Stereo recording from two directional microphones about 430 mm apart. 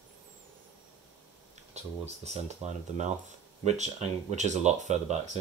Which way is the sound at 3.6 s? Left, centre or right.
Centre.